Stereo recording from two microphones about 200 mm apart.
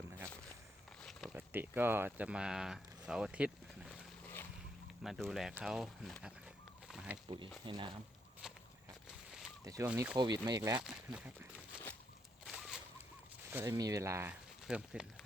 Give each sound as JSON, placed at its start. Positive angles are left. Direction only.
{"t": 1.0, "sound": "a sound", "side_deg": 0}
{"t": 1.4, "sound": "speech", "side_deg": -10}
{"t": 5.0, "sound": "speech", "side_deg": 0}
{"t": 6.8, "sound": "a sound", "side_deg": -5}
{"t": 7.6, "sound": "speech", "side_deg": -25}
{"t": 9.6, "sound": "speech", "side_deg": -10}
{"t": 10.2, "sound": "speech", "side_deg": -20}
{"t": 10.8, "sound": "speech", "side_deg": -5}
{"t": 12.5, "sound": "a sound", "side_deg": 0}
{"t": 13.5, "sound": "speech", "side_deg": -10}